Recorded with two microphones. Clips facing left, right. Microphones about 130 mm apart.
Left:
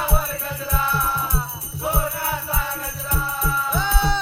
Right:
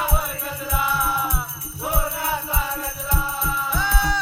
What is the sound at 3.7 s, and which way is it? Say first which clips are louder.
Music: left 1 dB; 20° left (ahead or behind).